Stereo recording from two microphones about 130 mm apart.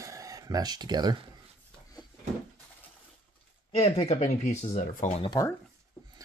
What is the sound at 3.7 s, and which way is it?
Speech, 50° left (ahead or behind).